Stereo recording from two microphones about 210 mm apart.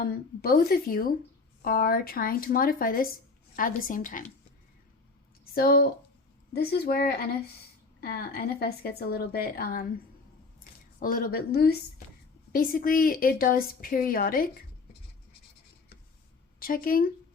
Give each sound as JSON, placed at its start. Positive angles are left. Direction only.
{"t": 0.0, "sound": "a woman's voice", "side_deg": 45}
{"t": 5.5, "sound": "a woman's voice", "side_deg": 45}
{"t": 16.6, "sound": "speech", "side_deg": 45}